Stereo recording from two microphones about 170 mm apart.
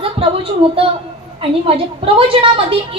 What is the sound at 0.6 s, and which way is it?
A woman's voice, 35° right (ahead or behind).